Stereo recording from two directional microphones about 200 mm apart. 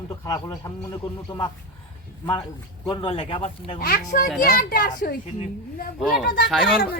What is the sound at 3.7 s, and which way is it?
Speech, 50° left (ahead or behind).